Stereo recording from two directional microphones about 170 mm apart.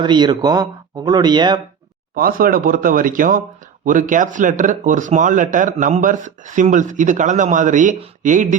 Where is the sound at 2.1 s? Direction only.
55° right (ahead or behind).